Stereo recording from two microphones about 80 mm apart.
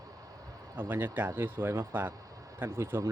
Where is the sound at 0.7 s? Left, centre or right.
Right.